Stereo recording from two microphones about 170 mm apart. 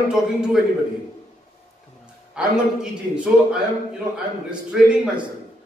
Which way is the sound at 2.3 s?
5° right (ahead or behind).